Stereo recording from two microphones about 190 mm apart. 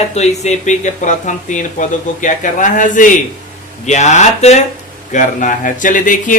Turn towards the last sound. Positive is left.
turn(degrees=45)  # may be behind; listen again after turning